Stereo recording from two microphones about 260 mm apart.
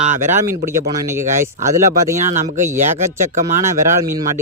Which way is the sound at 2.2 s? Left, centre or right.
Right.